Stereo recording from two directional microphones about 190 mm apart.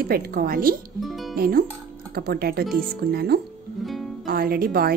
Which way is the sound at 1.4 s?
50° right (ahead or behind).